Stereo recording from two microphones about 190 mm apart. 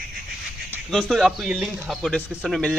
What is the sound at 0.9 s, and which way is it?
Speech, centre (ahead or behind).